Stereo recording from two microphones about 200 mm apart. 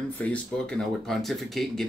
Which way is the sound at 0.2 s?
5° left (ahead or behind).